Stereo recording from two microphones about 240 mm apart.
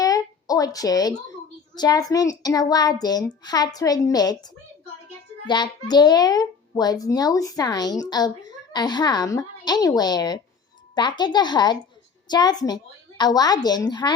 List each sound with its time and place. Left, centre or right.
0.0 s a child's voice: centre